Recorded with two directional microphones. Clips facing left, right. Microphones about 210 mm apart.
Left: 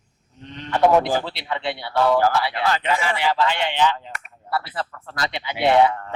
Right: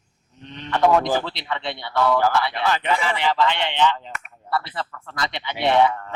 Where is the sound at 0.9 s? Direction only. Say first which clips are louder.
Left 1 dB; 15° left (ahead or behind).